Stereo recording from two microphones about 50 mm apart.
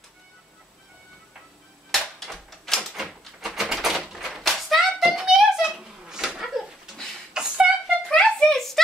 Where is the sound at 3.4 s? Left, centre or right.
Centre.